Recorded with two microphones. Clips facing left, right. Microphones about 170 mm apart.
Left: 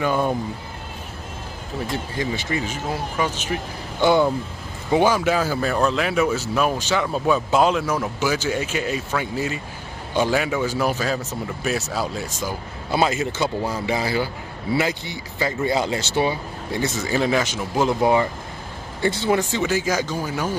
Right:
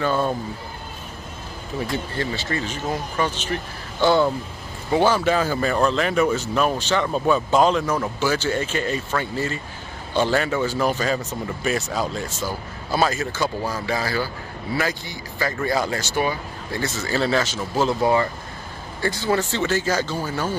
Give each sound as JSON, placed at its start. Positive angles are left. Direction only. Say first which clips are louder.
{"t": 0.0, "sound": "speech", "louder": "left 1 dB", "side_deg": 15}
{"t": 2.1, "sound": "speech", "louder": "left 4 dB", "side_deg": 15}
{"t": 19.5, "sound": "speech", "louder": "even", "side_deg": 10}